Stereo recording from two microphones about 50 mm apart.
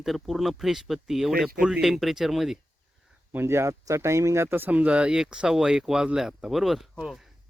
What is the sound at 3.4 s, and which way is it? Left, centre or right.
Speech, right.